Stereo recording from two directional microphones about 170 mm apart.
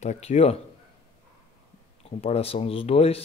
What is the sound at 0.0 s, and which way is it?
Speech, 40° left (ahead or behind).